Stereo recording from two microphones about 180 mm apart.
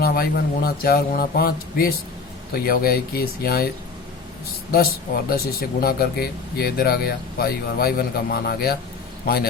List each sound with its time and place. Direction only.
0.0 s speech: 55° left (ahead or behind)
5.3 s speech: 55° left (ahead or behind)